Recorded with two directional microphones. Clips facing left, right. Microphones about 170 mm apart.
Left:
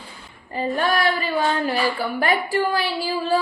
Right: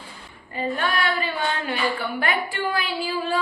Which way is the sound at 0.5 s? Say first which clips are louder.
Left 4 dB; 40° left (ahead or behind).